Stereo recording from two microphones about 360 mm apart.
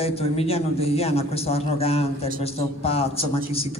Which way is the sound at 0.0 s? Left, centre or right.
Centre.